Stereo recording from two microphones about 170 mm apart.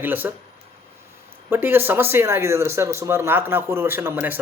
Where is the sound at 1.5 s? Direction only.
10° right (ahead or behind).